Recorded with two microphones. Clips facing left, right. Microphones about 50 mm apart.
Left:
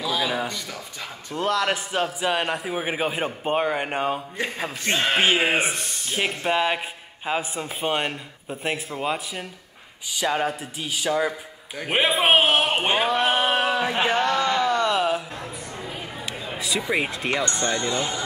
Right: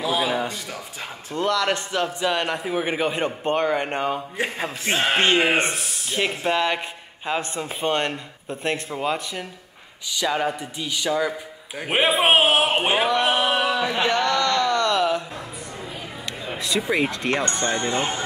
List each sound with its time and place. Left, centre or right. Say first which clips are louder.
0.2 s speech: right 2 dB; centre
0.5 s speech: right 1 dB; centre
1.3 s a man's voice: right 1 dB; centre
4.9 s speech: right 1 dB; centre
5.2 s a man's voice: right 2 dB; centre
14.2 s a sound: right 1 dB; centre
16.5 s a sound: right 2 dB; centre
16.9 s a man's voice: right 2 dB; centre
17.4 s speech: right 1 dB; right